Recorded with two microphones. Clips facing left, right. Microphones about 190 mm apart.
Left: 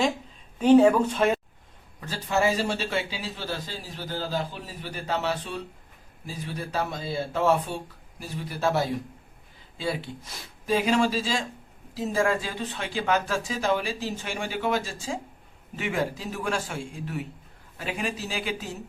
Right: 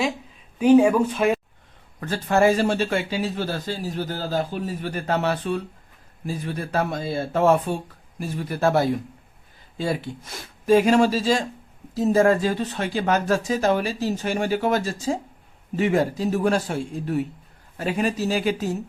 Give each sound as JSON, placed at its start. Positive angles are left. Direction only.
{"t": 0.6, "sound": "speech", "side_deg": -10}
{"t": 2.0, "sound": "a man's voice", "side_deg": -55}